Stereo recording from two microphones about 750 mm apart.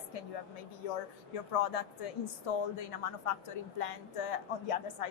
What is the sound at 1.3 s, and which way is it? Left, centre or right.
Speech, left.